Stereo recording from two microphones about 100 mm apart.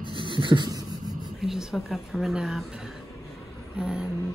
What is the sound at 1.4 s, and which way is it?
Speech, 5° right (ahead or behind).